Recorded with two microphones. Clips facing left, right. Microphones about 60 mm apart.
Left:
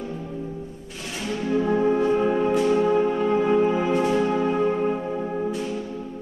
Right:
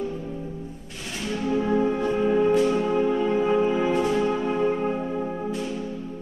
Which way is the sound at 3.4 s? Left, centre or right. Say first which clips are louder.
Left 1 dB; centre.